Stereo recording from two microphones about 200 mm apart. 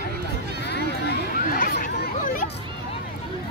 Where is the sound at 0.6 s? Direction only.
55° left (ahead or behind).